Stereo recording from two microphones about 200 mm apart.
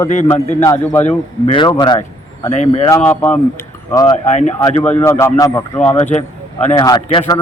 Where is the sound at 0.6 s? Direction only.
15° left (ahead or behind).